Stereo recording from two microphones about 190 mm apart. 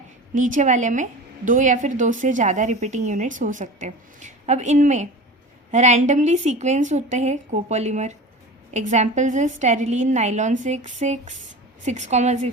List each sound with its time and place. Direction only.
0.3 s a woman's voice: 40° right (ahead or behind)